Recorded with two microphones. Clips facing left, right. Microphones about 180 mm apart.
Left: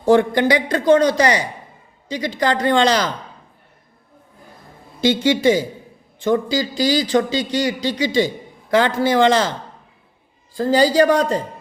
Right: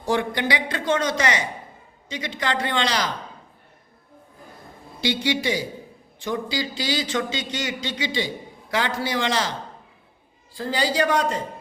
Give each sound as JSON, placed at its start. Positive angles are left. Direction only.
{"t": 0.0, "sound": "a man's voice", "side_deg": 50}
{"t": 4.9, "sound": "a man's voice", "side_deg": 50}
{"t": 10.5, "sound": "a man's voice", "side_deg": 40}